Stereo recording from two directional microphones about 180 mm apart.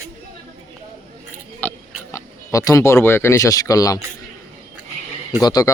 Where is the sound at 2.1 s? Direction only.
20° left (ahead or behind).